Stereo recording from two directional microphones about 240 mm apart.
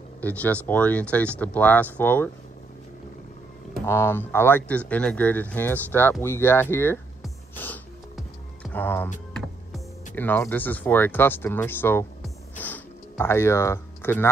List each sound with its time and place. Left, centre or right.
0.2 s speech: centre
3.8 s speech: centre
7.5 s music: centre
10.1 s speech: centre
12.5 s music: centre